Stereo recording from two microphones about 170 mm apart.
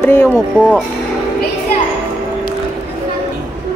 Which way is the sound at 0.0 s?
15° left (ahead or behind).